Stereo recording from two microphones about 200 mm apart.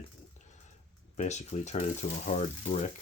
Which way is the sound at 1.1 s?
35° left (ahead or behind).